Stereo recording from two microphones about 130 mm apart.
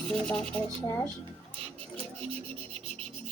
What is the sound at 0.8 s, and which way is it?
Speech, 20° left (ahead or behind).